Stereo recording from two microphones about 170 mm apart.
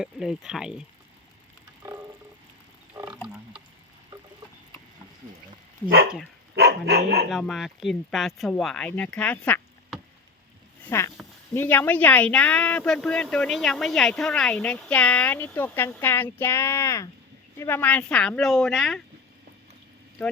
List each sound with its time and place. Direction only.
0.0 s speech: 5° right (ahead or behind)
3.1 s frog: 5° right (ahead or behind)
6.6 s dog: 70° right (ahead or behind)
7.3 s speech: centre (ahead or behind)